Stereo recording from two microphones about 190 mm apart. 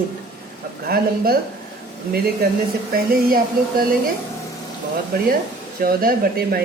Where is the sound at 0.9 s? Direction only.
55° right (ahead or behind).